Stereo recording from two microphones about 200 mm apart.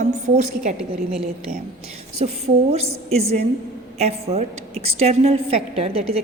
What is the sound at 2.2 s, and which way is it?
A woman's voice, 35° right (ahead or behind).